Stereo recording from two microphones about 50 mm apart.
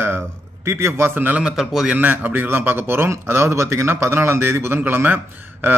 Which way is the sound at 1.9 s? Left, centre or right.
Right.